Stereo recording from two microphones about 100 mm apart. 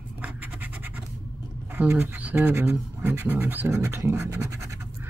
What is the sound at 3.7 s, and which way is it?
Scratch, 30° right (ahead or behind).